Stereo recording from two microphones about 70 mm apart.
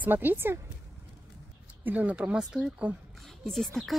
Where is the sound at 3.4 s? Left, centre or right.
Centre.